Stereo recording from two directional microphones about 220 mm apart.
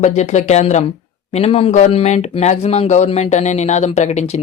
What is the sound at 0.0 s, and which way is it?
Speech, 30° left (ahead or behind).